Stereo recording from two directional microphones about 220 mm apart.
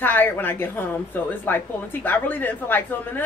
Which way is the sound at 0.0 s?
10° left (ahead or behind).